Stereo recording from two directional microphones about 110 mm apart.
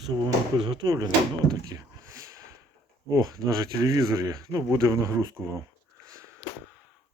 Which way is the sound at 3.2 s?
35° right (ahead or behind).